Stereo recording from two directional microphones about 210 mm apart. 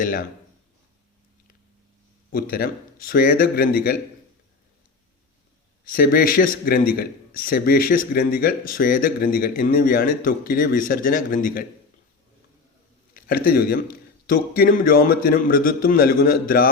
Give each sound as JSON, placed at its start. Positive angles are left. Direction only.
{"t": 0.0, "sound": "speech", "side_deg": 40}
{"t": 2.3, "sound": "a man's voice", "side_deg": 45}
{"t": 5.8, "sound": "a man's voice", "side_deg": 45}
{"t": 13.1, "sound": "a man's voice", "side_deg": 45}